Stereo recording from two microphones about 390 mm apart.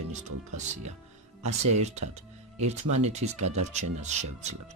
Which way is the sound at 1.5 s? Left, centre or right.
Right.